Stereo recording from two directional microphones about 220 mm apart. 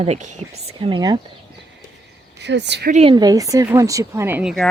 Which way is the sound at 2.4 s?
50° right (ahead or behind).